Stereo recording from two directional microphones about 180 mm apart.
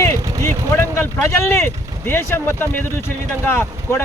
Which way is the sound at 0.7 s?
15° left (ahead or behind).